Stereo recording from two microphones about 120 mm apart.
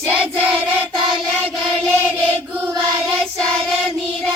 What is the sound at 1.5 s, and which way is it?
Chant, 10° right (ahead or behind).